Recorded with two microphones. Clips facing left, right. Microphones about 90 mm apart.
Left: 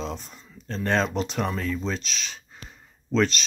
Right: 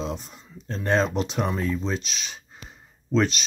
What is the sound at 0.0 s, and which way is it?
Speech, 15° right (ahead or behind).